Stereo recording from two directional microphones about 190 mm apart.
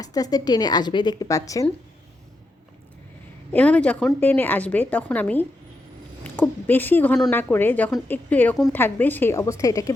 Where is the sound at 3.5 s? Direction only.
5° left (ahead or behind).